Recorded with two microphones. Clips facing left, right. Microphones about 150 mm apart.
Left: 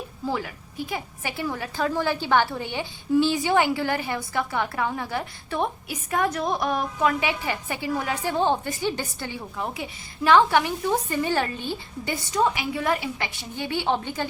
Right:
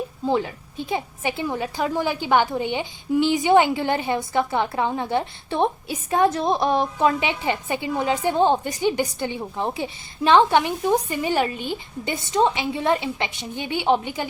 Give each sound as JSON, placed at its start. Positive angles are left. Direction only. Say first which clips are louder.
{"t": 0.3, "sound": "a woman's voice", "louder": "right 6 dB", "side_deg": -25}